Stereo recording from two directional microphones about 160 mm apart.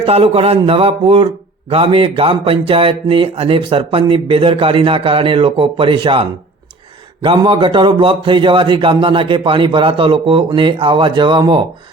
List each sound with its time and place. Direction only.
0.0 s speech: 40° right (ahead or behind)